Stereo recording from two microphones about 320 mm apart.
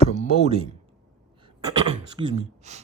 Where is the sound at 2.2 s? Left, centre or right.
Right.